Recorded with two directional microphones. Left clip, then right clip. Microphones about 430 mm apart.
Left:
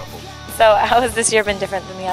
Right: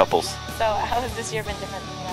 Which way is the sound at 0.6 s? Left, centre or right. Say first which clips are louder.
Left 11 dB; left.